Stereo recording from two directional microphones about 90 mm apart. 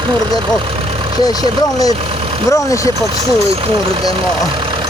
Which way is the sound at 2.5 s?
35° left (ahead or behind).